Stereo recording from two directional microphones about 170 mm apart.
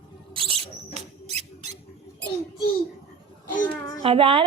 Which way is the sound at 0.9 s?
40° right (ahead or behind).